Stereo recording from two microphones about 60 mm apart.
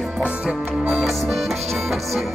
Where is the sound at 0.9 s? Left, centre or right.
Centre.